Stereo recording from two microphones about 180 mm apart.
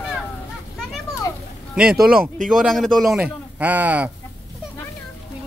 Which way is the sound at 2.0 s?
50° right (ahead or behind).